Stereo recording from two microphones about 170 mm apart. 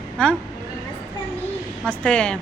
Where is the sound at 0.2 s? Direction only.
5° left (ahead or behind).